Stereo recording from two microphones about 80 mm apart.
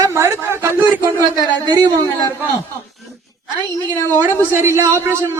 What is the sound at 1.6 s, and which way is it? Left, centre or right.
Speech, right.